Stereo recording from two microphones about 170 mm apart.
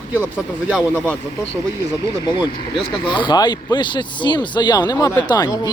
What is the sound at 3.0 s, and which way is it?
Speech, 30° left (ahead or behind).